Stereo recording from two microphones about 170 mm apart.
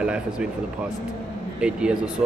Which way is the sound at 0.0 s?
5° right (ahead or behind).